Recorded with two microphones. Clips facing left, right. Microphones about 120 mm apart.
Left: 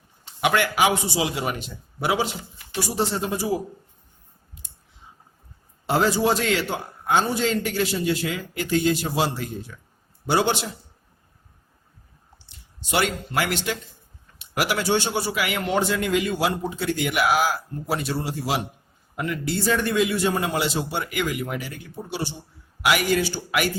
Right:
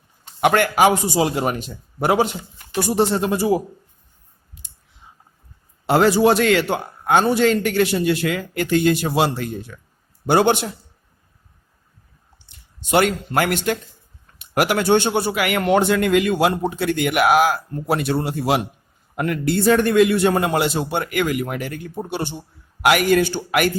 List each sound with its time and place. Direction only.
0.3 s a man's voice: 50° right (ahead or behind)
2.7 s a man's voice: 60° right (ahead or behind)
5.8 s a man's voice: 70° right (ahead or behind)
12.5 s a man's voice: 50° right (ahead or behind)